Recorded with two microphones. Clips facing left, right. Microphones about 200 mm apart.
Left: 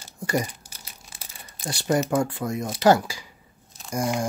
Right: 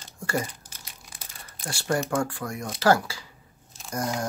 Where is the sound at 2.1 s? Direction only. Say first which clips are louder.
Left 4 dB; 20° left (ahead or behind).